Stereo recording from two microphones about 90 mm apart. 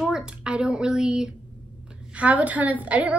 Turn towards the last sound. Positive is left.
turn(degrees=-15)  # may be behind; listen again after turning